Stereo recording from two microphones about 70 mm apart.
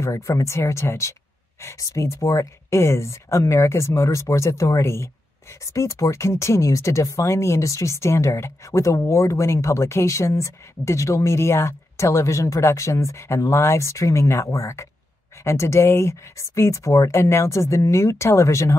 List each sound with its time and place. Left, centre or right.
0.0 s speech: left